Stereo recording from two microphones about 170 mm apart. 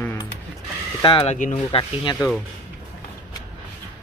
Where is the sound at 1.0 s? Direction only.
30° left (ahead or behind).